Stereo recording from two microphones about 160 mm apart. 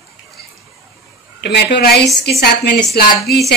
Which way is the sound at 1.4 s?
90° left.